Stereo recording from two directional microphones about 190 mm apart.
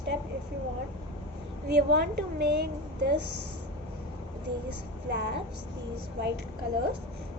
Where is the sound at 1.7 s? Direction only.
60° right (ahead or behind).